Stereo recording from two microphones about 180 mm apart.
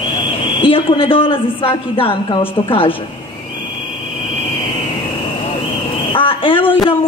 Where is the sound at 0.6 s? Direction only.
30° left (ahead or behind).